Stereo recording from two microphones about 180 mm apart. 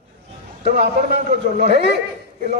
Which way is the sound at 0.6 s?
60° right (ahead or behind).